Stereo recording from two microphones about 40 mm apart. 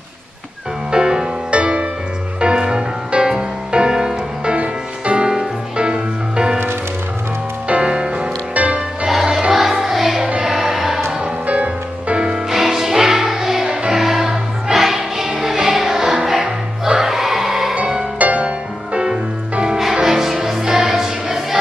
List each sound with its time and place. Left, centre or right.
0.9 s music: right
7.6 s music: right
9.0 s music: centre
11.4 s music: right
12.4 s music: centre
18.2 s music: right
19.8 s music: centre